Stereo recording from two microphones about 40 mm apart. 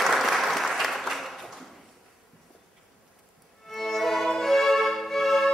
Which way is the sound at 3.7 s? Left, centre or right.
Centre.